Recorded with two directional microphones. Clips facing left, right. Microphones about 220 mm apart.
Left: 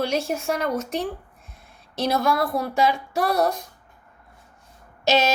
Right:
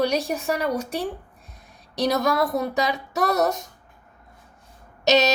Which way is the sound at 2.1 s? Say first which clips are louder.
Left 1 dB; 40° right (ahead or behind).